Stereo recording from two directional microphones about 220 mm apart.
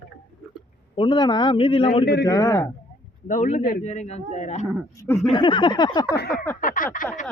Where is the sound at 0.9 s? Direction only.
20° left (ahead or behind).